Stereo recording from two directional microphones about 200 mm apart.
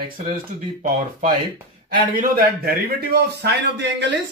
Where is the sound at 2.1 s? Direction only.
45° right (ahead or behind).